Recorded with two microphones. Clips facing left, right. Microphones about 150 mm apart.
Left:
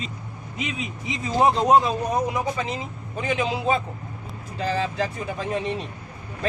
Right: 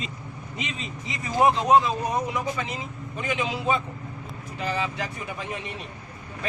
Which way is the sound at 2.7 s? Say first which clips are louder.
Left 3 dB; 35° left (ahead or behind).